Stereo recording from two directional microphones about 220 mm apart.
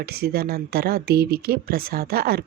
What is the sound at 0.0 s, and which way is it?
Speech, 45° right (ahead or behind).